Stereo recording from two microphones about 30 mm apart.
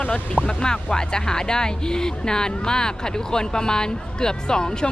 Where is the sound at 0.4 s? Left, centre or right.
Left.